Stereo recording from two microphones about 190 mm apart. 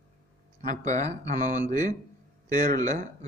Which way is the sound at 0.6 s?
40° right (ahead or behind).